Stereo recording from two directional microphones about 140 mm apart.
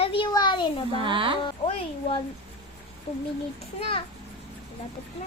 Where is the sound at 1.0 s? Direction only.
40° right (ahead or behind).